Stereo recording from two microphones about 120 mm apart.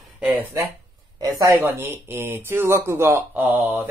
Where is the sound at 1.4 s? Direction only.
20° right (ahead or behind).